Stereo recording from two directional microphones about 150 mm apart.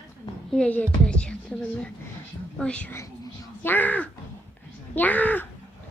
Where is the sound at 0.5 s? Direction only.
10° left (ahead or behind).